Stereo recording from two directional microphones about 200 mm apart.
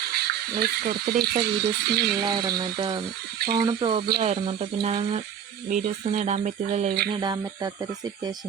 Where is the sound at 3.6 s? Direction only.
25° right (ahead or behind).